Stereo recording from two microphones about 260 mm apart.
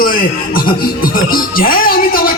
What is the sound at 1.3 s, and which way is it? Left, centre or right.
A man's voice, left.